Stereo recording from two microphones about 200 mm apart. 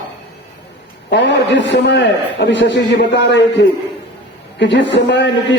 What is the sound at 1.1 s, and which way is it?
A man's voice, 60° left (ahead or behind).